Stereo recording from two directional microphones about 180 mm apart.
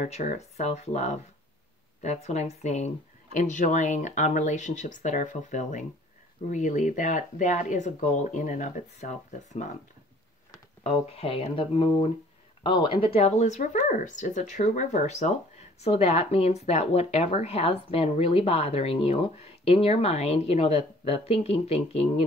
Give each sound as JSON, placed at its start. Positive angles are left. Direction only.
{"t": 0.0, "sound": "speech", "side_deg": 40}
{"t": 10.8, "sound": "speech", "side_deg": 35}